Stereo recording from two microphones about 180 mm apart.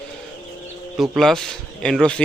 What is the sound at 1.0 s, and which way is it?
A man's voice, centre (ahead or behind).